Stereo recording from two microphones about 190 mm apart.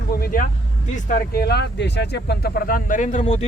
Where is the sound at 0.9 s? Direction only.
45° left (ahead or behind).